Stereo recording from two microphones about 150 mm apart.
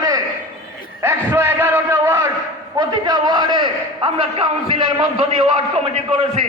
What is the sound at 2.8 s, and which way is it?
A man's voice, 25° right (ahead or behind).